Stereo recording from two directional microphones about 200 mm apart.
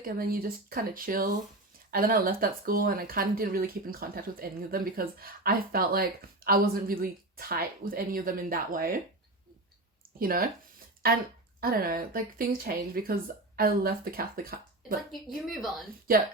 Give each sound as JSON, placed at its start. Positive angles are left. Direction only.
{"t": 0.0, "sound": "speech", "side_deg": -45}
{"t": 10.2, "sound": "speech", "side_deg": -45}
{"t": 11.6, "sound": "speech", "side_deg": -50}
{"t": 15.4, "sound": "speech", "side_deg": 0}